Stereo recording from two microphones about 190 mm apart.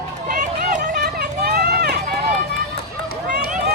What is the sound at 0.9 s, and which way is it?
Run, 60° right (ahead or behind).